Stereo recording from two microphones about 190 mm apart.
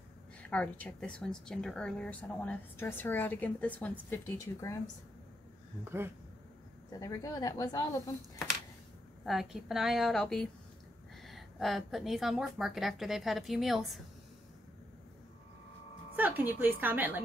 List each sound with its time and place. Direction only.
0.4 s a woman's voice: 5° left (ahead or behind)
6.9 s a woman's voice: 20° left (ahead or behind)
9.2 s a woman's voice: centre (ahead or behind)
16.2 s speech: 10° right (ahead or behind)